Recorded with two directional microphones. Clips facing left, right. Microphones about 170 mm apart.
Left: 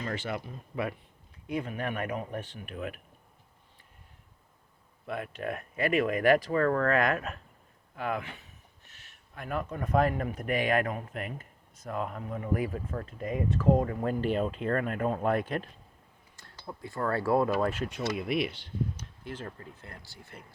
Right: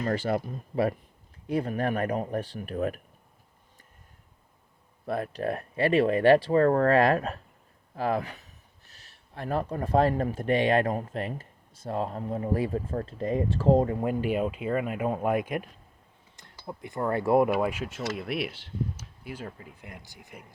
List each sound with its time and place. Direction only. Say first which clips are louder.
0.0 s speech: right 7 dB; 40° right (ahead or behind)
5.0 s speech: right 5 dB; 35° right (ahead or behind)
14.0 s speech: right 2 dB; 10° right (ahead or behind)